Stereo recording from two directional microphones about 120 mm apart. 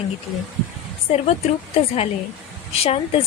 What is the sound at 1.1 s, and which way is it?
Speech, 60° left (ahead or behind).